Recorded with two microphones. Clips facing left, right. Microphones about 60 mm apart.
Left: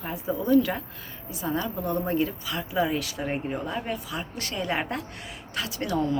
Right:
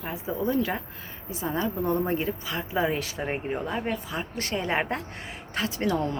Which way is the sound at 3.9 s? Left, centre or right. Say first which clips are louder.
Right 1 dB; right.